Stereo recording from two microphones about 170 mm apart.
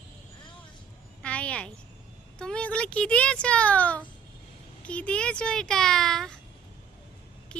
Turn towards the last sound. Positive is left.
turn(degrees=5)  # may be behind; listen again after turning